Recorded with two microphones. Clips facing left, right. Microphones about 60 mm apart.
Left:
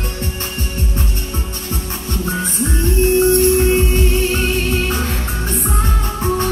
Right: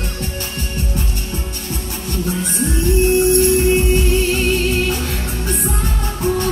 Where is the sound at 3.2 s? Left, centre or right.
Left.